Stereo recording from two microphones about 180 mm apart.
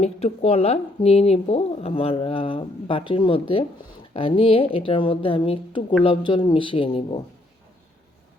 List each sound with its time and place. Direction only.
0.0 s a woman's voice: 35° left (ahead or behind)